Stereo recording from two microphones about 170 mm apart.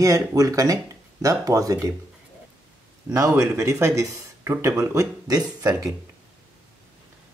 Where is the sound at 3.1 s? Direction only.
20° right (ahead or behind).